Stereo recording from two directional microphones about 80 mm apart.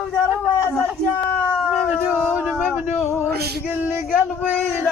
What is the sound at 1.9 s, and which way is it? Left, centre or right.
Speech, right.